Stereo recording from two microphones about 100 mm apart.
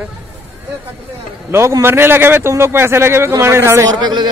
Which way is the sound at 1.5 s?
25° right (ahead or behind).